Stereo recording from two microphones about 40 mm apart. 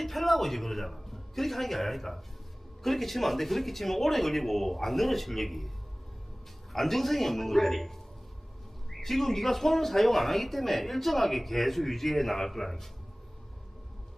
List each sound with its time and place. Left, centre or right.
0.0 s a man's voice: centre
6.7 s speech: centre